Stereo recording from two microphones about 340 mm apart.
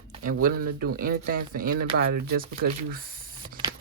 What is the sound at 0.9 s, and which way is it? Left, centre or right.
Speech, right.